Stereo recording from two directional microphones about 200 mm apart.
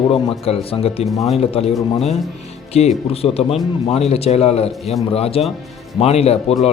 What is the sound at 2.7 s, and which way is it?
A man's voice, 30° left (ahead or behind).